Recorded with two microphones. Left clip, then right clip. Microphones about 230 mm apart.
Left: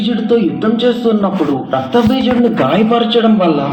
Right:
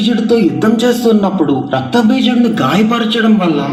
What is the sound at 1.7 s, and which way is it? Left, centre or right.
Speech, right.